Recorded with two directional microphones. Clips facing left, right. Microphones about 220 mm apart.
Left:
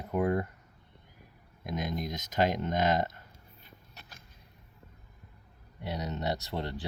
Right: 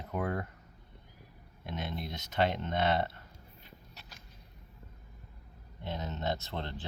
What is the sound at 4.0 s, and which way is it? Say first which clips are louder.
Vehicle: left 1 dB; 55° left (ahead or behind).